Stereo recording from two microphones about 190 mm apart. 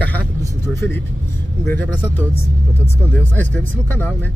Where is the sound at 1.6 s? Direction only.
10° left (ahead or behind).